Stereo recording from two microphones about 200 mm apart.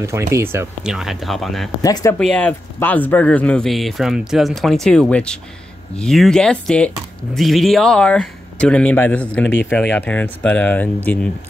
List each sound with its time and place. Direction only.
0.0 s speech: 15° right (ahead or behind)
0.9 s speech: centre (ahead or behind)
1.8 s speech: 15° left (ahead or behind)
2.1 s speech: 5° left (ahead or behind)